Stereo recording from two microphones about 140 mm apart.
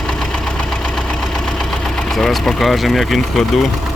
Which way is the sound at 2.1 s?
Centre (ahead or behind).